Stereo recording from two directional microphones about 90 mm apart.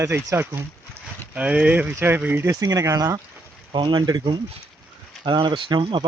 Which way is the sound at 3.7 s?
60° right (ahead or behind).